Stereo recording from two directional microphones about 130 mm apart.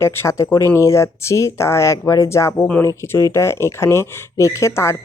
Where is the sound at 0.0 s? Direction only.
20° left (ahead or behind).